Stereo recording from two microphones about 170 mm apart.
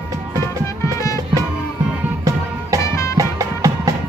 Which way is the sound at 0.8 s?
20° left (ahead or behind).